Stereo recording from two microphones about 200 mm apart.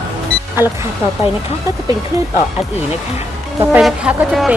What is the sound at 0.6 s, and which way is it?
Speech, 10° right (ahead or behind).